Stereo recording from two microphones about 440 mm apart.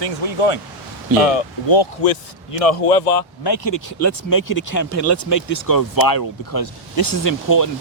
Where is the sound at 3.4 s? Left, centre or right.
Left.